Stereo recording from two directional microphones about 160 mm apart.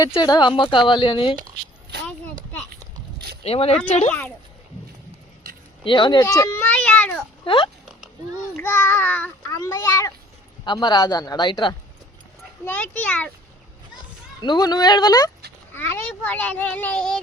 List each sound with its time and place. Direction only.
0.1 s speech: 25° left (ahead or behind)
3.4 s speech: 40° left (ahead or behind)
5.8 s speech: 30° left (ahead or behind)
6.2 s a child's voice: 20° left (ahead or behind)
6.7 s cat: 5° left (ahead or behind)
7.4 s speech: 30° left (ahead or behind)
8.5 s a child's voice: 15° left (ahead or behind); by 11.7 s 30° left (ahead or behind)
12.6 s a child's voice: 10° left (ahead or behind)
14.4 s speech: 25° left (ahead or behind)
15.7 s a child's voice: 15° left (ahead or behind)